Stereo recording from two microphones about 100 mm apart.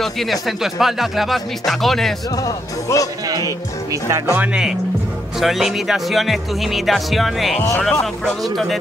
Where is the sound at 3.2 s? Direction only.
35° right (ahead or behind).